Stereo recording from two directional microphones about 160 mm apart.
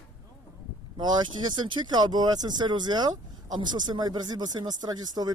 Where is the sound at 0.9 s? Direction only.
25° right (ahead or behind).